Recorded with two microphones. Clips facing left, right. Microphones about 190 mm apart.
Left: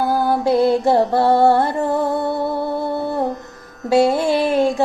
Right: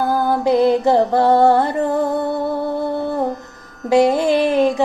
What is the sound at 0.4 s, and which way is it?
Music, 20° right (ahead or behind).